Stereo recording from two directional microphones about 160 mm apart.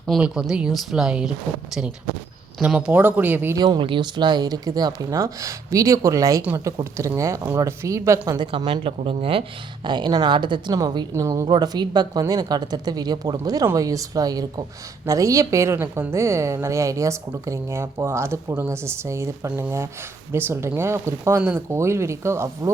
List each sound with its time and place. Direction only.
0.1 s speech: 5° right (ahead or behind)
2.6 s a woman's voice: 5° right (ahead or behind)
3.6 s a woman's voice: 30° right (ahead or behind)
8.5 s a woman's voice: 35° right (ahead or behind); by 22.7 s 15° right (ahead or behind)